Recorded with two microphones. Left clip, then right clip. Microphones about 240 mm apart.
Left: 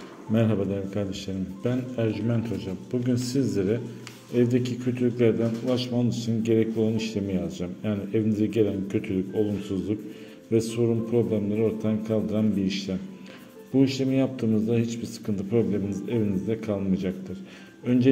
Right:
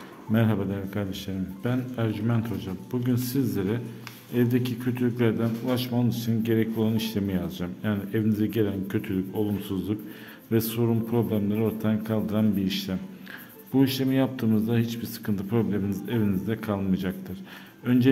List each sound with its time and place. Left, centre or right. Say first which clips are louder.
0.3 s a man's voice: left 2 dB; centre